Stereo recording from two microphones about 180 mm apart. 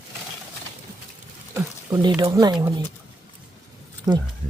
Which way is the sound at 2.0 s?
25° right (ahead or behind).